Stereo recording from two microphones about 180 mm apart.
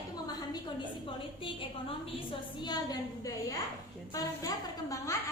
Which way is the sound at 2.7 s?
20° left (ahead or behind).